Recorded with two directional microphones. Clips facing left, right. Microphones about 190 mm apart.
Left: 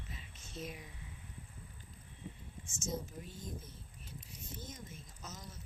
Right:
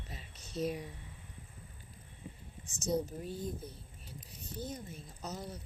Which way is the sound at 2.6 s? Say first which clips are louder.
Right 8 dB; 35° right (ahead or behind).